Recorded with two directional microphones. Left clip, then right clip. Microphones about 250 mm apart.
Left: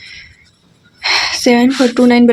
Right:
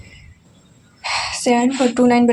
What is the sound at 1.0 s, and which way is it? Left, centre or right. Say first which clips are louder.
Speech: left 7 dB; left.